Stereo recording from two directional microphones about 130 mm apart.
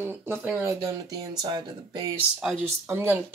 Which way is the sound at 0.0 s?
15° right (ahead or behind).